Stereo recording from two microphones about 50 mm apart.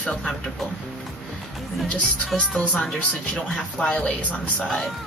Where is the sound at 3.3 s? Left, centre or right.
Centre.